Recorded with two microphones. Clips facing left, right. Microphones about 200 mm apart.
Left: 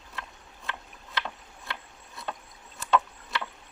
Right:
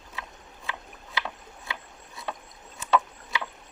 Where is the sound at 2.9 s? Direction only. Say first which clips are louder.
Right 1 dB; centre (ahead or behind).